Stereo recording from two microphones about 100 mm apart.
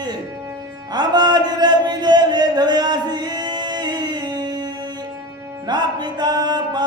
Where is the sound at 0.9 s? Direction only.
45° right (ahead or behind).